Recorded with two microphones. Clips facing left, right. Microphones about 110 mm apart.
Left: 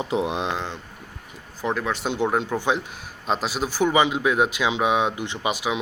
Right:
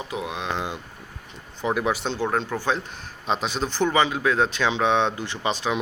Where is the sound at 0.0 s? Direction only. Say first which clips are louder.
Left 6 dB; 30° left (ahead or behind).